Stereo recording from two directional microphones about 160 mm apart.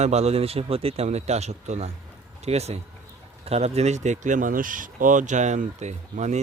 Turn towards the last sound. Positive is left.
turn(degrees=-45)  # may be behind; listen again after turning